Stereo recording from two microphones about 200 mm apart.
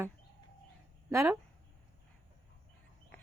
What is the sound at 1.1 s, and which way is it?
Speech, 15° right (ahead or behind).